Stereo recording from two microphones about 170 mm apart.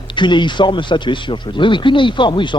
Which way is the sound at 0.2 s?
25° left (ahead or behind).